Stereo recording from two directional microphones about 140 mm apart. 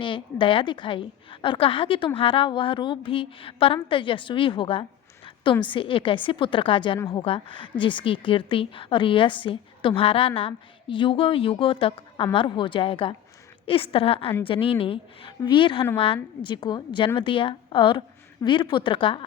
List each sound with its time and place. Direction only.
0.0 s a woman's voice: 35° left (ahead or behind)